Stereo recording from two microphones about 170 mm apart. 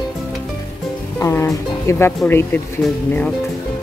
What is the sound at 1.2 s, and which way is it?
Speech, 15° left (ahead or behind).